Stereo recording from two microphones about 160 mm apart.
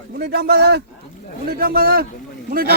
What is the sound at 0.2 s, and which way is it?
Speech, 90° right.